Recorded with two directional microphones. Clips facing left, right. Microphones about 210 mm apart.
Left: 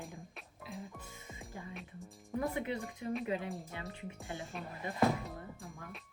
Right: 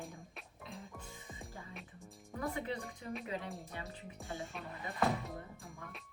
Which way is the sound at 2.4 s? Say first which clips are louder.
Left 2 dB; 20° left (ahead or behind).